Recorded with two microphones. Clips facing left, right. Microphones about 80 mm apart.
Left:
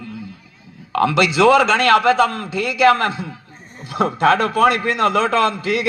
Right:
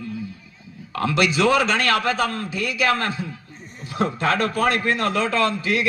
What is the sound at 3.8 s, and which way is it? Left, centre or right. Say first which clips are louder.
Speech: left 6 dB; left.